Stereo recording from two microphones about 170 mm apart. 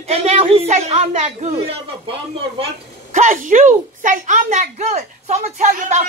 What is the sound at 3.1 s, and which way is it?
A child's voice, 50° right (ahead or behind).